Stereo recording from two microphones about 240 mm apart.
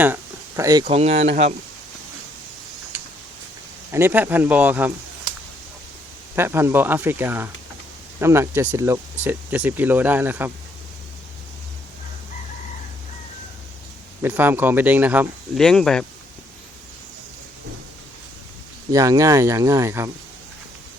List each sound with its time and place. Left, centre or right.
0.0 s speech: centre; by 1.5 s right
3.9 s speech: centre
6.3 s speech: centre
14.2 s speech: centre
18.9 s speech: centre